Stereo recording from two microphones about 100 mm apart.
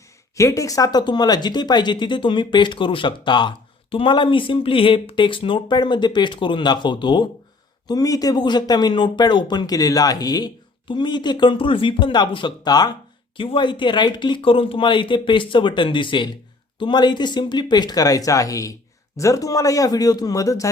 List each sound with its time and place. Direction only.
0.3 s speech: 30° left (ahead or behind); by 7.3 s 50° left (ahead or behind)
7.9 s speech: 35° left (ahead or behind)
13.3 s speech: 60° left (ahead or behind); by 20.7 s 35° left (ahead or behind)